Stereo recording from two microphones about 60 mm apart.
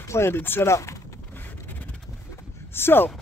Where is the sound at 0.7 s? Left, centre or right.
Left.